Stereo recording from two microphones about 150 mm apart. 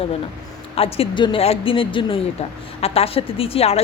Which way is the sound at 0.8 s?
40° left (ahead or behind).